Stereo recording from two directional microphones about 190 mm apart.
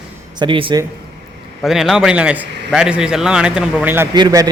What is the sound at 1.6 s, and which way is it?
A man's voice, centre (ahead or behind).